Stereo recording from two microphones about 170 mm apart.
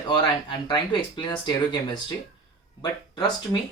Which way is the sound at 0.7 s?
25° left (ahead or behind).